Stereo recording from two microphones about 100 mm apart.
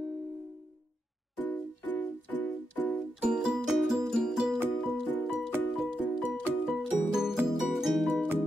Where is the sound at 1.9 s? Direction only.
15° left (ahead or behind).